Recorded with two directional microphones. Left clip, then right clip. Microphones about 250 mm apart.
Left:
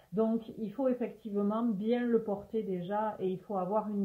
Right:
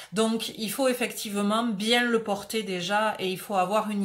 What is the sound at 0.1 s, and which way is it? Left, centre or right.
Speech, centre.